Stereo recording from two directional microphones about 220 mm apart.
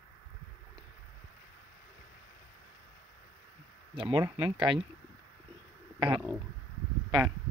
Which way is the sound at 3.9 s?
25° right (ahead or behind).